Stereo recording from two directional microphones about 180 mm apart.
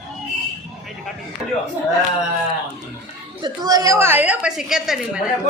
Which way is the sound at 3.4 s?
20° right (ahead or behind).